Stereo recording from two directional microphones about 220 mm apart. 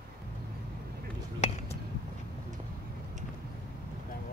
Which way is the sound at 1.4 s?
30° left (ahead or behind).